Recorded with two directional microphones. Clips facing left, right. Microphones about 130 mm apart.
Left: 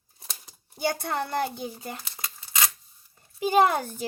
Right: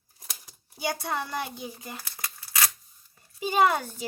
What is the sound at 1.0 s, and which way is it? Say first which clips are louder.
Speech: left 3 dB; 55° left (ahead or behind).